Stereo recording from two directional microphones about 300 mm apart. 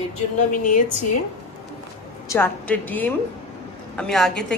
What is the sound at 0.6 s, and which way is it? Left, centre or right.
Speech, left.